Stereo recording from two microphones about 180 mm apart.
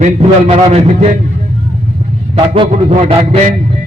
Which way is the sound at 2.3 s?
30° right (ahead or behind).